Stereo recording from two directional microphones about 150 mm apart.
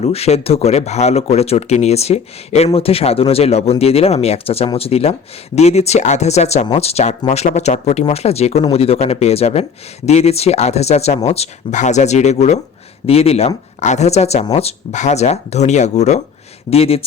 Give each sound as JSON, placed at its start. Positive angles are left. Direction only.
{"t": 0.0, "sound": "speech", "side_deg": 45}